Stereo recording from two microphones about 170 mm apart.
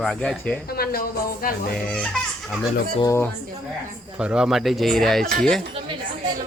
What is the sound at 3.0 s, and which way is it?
Speech, 15° left (ahead or behind).